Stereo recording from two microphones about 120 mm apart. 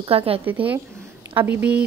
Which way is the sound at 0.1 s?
55° right (ahead or behind).